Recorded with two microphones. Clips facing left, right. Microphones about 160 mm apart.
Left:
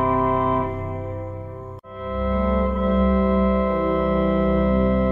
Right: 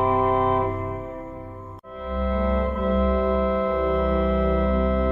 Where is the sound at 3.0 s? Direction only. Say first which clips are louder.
Left 2 dB; 15° right (ahead or behind).